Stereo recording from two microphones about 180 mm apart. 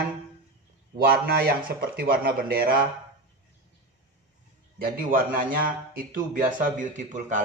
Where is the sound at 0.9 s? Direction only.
55° right (ahead or behind).